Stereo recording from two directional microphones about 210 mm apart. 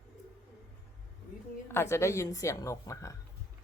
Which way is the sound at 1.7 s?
10° left (ahead or behind).